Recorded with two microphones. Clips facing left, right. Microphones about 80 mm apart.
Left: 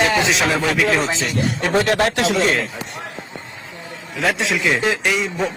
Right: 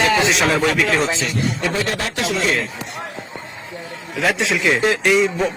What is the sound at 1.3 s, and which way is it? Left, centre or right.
Speech, left.